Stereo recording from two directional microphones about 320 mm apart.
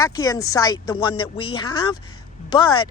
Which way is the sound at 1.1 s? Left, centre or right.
Left.